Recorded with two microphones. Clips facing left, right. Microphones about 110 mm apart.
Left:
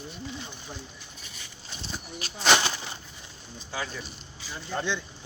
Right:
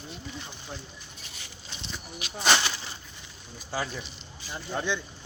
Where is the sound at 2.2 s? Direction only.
40° left (ahead or behind).